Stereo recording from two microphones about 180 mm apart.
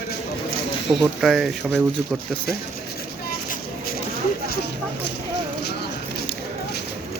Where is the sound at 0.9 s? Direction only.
Centre (ahead or behind).